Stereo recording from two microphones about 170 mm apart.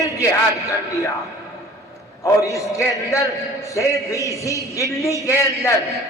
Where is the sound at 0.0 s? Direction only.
20° left (ahead or behind).